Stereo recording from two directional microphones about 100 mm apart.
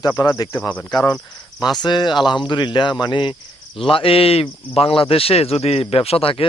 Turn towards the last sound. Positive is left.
turn(degrees=65)  # may be behind; listen again after turning